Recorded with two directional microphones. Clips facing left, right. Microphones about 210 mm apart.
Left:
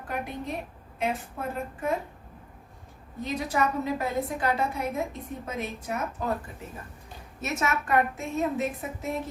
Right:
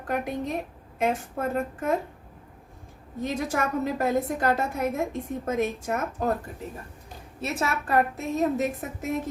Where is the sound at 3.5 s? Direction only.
50° right (ahead or behind).